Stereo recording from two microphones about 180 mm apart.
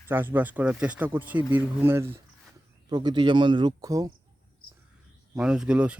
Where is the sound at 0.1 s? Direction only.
10° right (ahead or behind).